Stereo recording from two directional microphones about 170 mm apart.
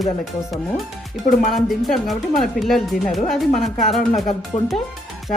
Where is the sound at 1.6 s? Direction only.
Centre (ahead or behind).